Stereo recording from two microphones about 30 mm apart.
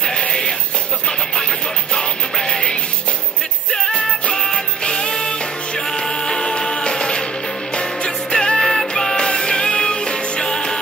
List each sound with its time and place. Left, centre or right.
2.0 s music: left
4.3 s music: left